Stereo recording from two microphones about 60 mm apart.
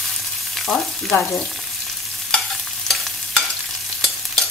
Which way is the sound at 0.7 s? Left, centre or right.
Left.